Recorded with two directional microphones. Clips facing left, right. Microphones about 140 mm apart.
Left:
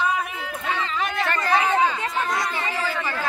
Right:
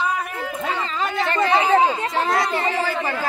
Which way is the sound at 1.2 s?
25° right (ahead or behind).